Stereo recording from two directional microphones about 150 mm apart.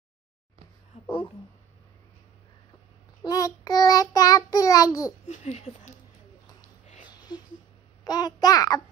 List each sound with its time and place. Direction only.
3.3 s child singing: 25° left (ahead or behind)
5.3 s a sound: 45° left (ahead or behind)
8.0 s child singing: 25° left (ahead or behind)